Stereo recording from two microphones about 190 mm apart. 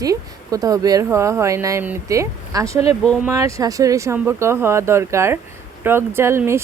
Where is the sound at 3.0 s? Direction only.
5° left (ahead or behind).